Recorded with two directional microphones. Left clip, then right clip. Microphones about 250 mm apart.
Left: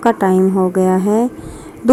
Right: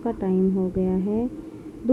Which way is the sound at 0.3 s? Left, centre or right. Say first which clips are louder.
Left 10 dB; left.